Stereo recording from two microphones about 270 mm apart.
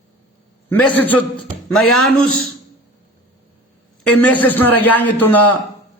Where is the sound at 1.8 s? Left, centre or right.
Left.